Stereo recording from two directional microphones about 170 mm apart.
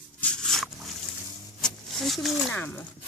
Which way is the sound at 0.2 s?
5° left (ahead or behind).